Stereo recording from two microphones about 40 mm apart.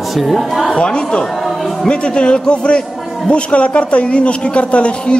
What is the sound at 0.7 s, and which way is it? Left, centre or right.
A man's voice, left.